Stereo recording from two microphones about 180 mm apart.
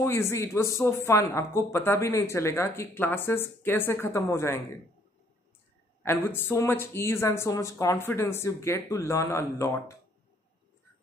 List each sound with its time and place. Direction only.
0.0 s speech: 15° left (ahead or behind)
6.0 s speech: 10° left (ahead or behind)